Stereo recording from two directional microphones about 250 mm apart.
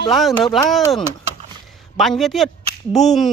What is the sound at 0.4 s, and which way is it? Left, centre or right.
Speech, centre.